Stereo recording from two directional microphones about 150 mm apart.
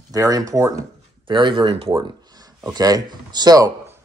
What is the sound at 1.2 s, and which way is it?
Speech, 30° right (ahead or behind).